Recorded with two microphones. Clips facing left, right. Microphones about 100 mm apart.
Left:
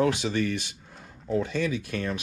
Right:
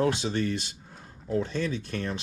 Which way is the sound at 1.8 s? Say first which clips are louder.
Left 2 dB; 10° left (ahead or behind).